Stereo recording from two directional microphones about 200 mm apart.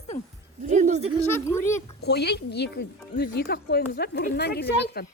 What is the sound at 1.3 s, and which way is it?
Speech, 10° left (ahead or behind).